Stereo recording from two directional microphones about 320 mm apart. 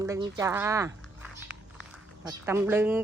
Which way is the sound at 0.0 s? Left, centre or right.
Centre.